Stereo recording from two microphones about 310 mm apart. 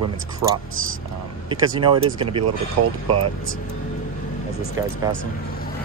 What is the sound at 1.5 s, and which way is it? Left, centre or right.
Speech, centre.